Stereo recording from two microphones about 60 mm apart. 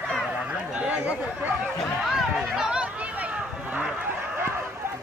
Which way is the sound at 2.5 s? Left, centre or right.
Centre.